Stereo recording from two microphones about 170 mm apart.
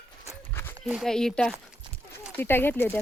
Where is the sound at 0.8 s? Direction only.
Centre (ahead or behind).